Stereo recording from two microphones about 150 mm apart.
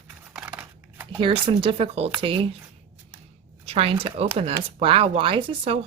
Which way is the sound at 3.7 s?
40° right (ahead or behind).